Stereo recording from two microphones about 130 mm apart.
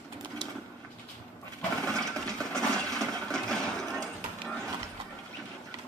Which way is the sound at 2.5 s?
5° left (ahead or behind).